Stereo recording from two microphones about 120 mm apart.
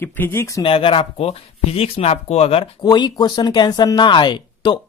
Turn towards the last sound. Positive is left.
turn(degrees=40)  # may be behind; listen again after turning